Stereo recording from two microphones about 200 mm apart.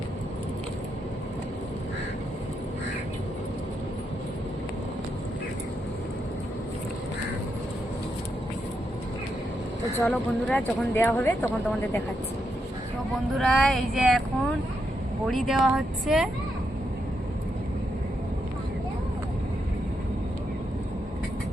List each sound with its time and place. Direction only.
10.0 s speech: 10° left (ahead or behind)
13.3 s speech: centre (ahead or behind)
15.3 s speech: centre (ahead or behind)